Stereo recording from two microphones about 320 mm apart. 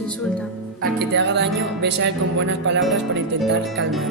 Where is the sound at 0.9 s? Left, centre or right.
Right.